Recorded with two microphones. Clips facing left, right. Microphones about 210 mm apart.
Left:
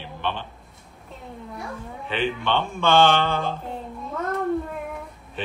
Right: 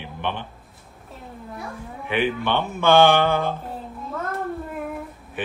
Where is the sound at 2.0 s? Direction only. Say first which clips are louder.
Right 3 dB; 15° right (ahead or behind).